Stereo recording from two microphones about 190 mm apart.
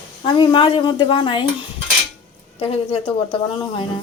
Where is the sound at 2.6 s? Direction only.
30° left (ahead or behind).